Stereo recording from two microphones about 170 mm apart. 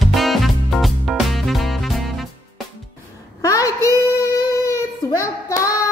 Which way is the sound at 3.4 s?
20° left (ahead or behind).